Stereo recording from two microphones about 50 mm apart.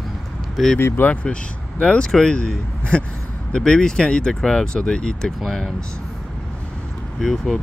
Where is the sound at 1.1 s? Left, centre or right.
Left.